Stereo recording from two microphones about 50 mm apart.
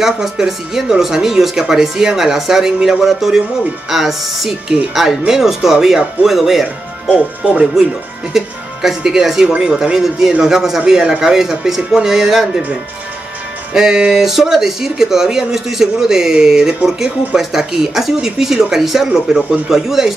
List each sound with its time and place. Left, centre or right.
0.0 s speech: centre
7.1 s speech: right
8.3 s speech: centre
13.7 s speech: centre